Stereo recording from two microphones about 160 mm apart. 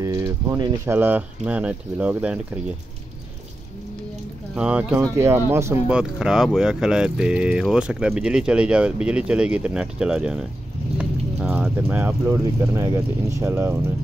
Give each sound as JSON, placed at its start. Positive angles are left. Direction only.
{"t": 0.0, "sound": "speech", "side_deg": -20}
{"t": 4.6, "sound": "speech", "side_deg": -10}